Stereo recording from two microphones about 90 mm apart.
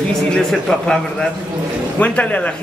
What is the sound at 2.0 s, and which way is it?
Speech, 15° left (ahead or behind).